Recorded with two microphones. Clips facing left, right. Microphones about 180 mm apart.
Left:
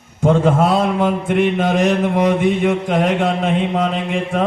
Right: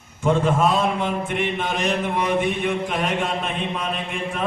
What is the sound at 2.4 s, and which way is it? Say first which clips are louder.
Mantra: left 7 dB; 80° left.